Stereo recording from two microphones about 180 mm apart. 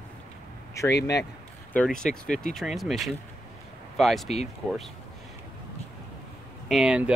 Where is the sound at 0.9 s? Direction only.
70° left (ahead or behind).